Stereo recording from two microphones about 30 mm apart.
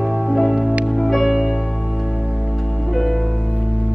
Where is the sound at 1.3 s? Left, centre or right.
Centre.